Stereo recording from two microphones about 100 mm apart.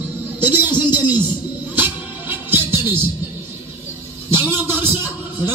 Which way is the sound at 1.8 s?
20° right (ahead or behind).